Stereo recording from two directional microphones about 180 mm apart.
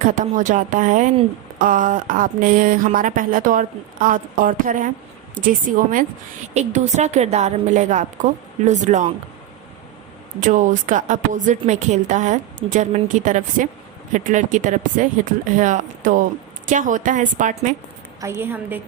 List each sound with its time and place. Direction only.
0.0 s a woman's voice: 45° right (ahead or behind)
10.4 s speech: 45° right (ahead or behind)
18.2 s a woman's voice: 10° right (ahead or behind)